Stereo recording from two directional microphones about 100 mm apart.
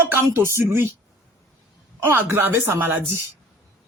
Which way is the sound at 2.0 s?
25° right (ahead or behind).